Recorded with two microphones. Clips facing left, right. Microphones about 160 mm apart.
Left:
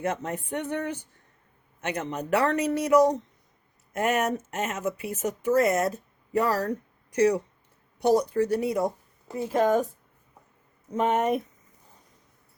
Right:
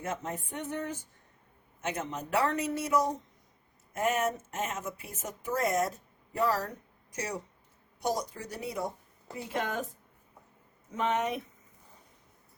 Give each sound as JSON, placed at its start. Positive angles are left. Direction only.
{"t": 0.0, "sound": "speech", "side_deg": 75}
{"t": 9.5, "sound": "speech", "side_deg": 40}
{"t": 10.9, "sound": "speech", "side_deg": 45}